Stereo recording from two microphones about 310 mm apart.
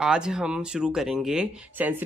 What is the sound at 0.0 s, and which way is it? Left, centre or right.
Speech, centre.